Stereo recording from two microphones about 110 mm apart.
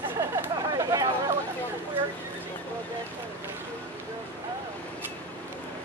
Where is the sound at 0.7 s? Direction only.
35° right (ahead or behind).